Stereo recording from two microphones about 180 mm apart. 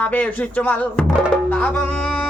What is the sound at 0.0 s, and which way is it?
Music, 10° left (ahead or behind).